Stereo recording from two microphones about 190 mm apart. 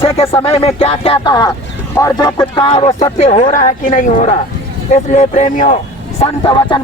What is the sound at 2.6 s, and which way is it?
Speech, 35° left (ahead or behind).